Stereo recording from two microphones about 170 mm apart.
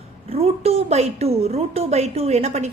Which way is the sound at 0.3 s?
35° right (ahead or behind).